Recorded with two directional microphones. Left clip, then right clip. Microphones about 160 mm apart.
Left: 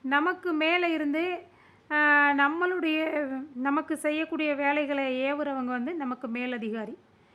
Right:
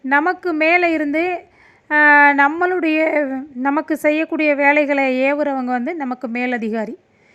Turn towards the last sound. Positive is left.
turn(degrees=-30)  # may be behind; listen again after turning